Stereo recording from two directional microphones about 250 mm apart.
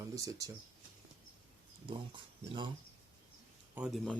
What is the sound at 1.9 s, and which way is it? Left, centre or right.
Speech, centre.